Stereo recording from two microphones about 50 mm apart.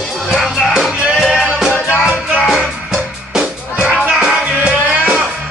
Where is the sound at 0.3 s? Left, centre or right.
Centre.